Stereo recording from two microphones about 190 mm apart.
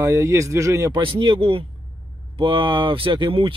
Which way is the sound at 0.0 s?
15° right (ahead or behind).